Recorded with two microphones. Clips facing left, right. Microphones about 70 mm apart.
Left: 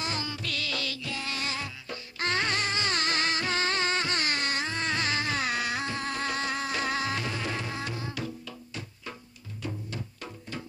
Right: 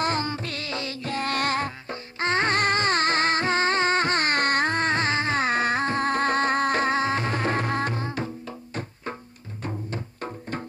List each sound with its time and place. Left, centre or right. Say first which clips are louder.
0.0 s music: right 8 dB; right
1.9 s music: right 5 dB; right